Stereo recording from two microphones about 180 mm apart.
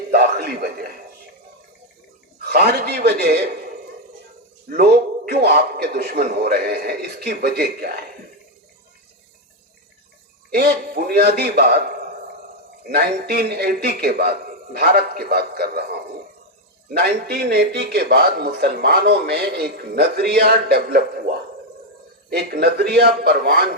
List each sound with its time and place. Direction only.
0.1 s a sound: 60° right (ahead or behind)
2.4 s a man's voice: 60° right (ahead or behind)
4.8 s speech: 60° right (ahead or behind)
10.5 s speech: 60° right (ahead or behind)
12.9 s speech: 60° right (ahead or behind)
17.0 s speech: 60° right (ahead or behind)
22.3 s speech: 60° right (ahead or behind)